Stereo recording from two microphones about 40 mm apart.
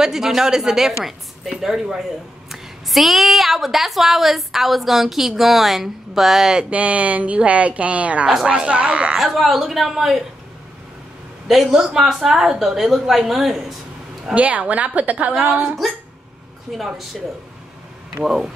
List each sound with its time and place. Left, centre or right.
0.0 s a woman's voice: centre
6.6 s speech: right
9.2 s a woman's voice: centre
11.7 s a woman's voice: centre
14.3 s speech: right
15.8 s a woman's voice: centre
18.2 s a woman's voice: centre